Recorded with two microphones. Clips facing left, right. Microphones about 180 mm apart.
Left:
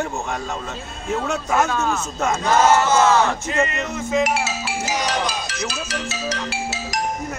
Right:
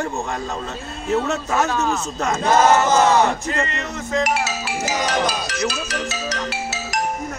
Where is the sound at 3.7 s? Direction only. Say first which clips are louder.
Left 2 dB; 5° left (ahead or behind).